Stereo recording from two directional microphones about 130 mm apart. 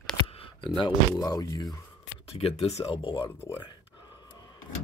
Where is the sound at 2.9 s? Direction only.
40° left (ahead or behind).